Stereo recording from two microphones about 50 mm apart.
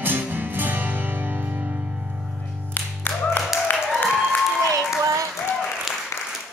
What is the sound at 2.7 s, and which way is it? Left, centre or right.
Music, left.